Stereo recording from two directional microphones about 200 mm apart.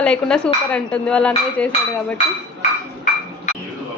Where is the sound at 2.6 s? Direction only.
35° left (ahead or behind).